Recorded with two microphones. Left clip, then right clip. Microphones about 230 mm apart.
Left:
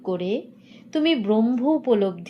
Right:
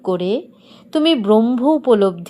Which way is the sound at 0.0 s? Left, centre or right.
Right.